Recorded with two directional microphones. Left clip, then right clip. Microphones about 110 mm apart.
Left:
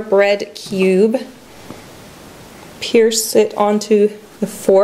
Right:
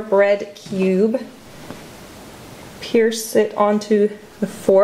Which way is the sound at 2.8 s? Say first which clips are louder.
Left 4 dB; 15° left (ahead or behind).